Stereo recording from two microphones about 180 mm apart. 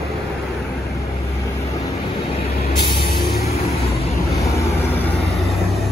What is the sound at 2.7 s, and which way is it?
Music, 25° left (ahead or behind).